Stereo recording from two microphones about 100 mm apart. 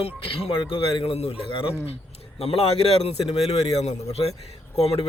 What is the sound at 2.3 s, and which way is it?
Speech, 85° left.